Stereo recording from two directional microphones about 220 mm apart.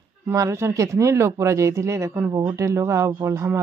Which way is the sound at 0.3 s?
15° right (ahead or behind).